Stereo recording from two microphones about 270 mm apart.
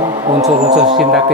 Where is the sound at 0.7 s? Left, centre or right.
Right.